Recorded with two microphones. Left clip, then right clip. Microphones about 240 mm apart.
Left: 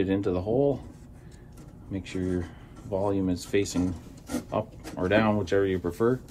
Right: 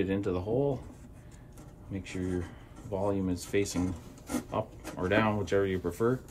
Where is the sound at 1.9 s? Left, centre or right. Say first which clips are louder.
Left 5 dB; centre.